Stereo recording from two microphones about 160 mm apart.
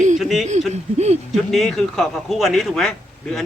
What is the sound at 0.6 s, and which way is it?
Speech, 45° right (ahead or behind).